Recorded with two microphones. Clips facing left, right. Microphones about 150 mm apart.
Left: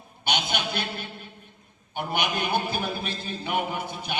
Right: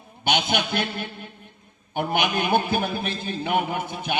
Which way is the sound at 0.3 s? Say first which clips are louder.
Right 5 dB; 55° right (ahead or behind).